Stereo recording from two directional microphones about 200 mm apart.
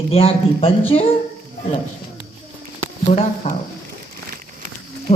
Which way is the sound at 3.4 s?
30° left (ahead or behind).